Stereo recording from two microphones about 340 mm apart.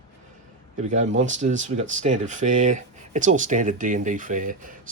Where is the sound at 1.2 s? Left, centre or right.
Right.